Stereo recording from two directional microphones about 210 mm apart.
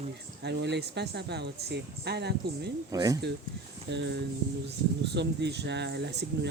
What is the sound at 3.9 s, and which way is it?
Speech, 55° right (ahead or behind).